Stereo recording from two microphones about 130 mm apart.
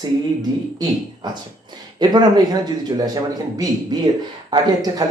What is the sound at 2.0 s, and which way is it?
Speech, 30° right (ahead or behind).